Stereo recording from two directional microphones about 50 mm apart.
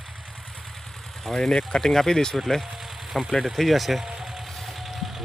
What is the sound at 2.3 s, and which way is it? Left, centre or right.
Speech, centre.